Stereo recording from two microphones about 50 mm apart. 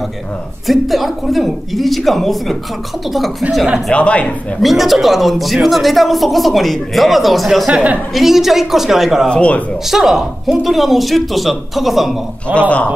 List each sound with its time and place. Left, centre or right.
0.7 s a woman's voice: centre
3.9 s speech: left
4.6 s a woman's voice: centre
7.7 s a woman's voice: right
8.1 s a woman's voice: centre
9.3 s speech: left
9.8 s a woman's voice: centre
12.5 s speech: left